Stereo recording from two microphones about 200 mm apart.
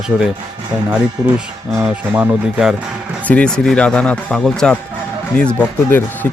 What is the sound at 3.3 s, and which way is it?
Speech, 5° left (ahead or behind).